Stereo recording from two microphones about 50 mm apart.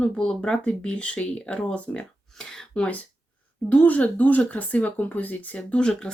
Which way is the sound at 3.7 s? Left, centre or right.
Left.